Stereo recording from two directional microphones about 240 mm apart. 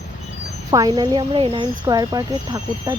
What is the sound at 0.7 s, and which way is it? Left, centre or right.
Speech, centre.